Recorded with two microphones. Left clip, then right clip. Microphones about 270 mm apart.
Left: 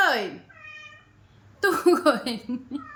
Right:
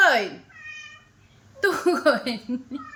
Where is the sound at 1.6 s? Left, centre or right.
Centre.